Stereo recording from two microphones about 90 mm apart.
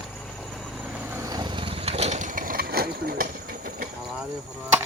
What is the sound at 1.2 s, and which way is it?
Vehicle, 50° right (ahead or behind).